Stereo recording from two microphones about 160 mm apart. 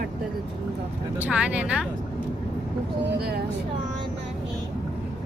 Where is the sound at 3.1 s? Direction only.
80° right.